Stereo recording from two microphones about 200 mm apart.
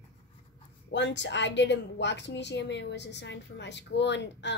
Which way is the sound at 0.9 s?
60° left (ahead or behind).